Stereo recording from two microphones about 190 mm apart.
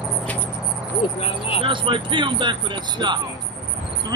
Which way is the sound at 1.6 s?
25° right (ahead or behind).